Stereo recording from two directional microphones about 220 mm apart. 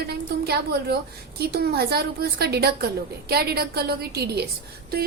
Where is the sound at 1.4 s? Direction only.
45° right (ahead or behind).